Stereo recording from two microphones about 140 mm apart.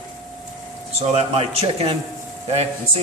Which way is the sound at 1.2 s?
45° right (ahead or behind).